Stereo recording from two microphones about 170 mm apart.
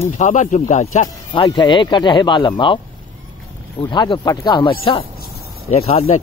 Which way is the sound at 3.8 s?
25° left (ahead or behind).